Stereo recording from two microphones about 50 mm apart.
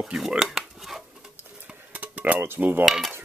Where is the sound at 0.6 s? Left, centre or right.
Centre.